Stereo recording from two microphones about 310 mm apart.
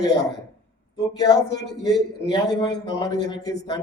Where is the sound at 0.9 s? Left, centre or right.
Centre.